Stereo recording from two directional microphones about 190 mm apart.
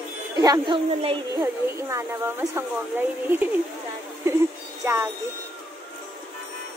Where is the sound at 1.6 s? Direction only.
15° right (ahead or behind).